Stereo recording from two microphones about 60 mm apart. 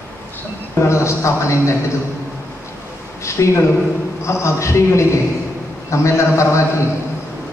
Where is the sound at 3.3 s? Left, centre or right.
Left.